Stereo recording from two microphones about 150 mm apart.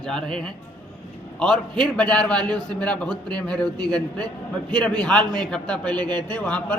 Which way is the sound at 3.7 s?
25° right (ahead or behind).